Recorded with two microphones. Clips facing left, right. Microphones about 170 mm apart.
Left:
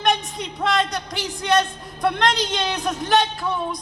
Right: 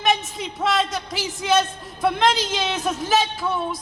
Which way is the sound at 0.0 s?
Centre (ahead or behind).